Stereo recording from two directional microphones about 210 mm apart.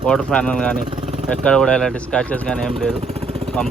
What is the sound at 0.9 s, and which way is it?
Vehicle, 25° right (ahead or behind).